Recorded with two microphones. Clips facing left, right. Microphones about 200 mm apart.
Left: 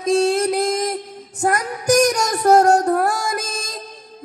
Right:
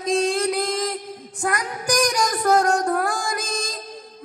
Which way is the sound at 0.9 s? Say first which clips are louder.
Left 3 dB; 45° left (ahead or behind).